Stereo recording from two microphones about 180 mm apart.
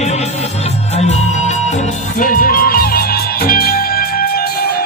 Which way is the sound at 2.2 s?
50° left (ahead or behind).